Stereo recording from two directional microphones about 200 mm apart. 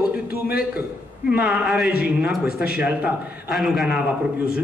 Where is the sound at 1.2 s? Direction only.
5° right (ahead or behind).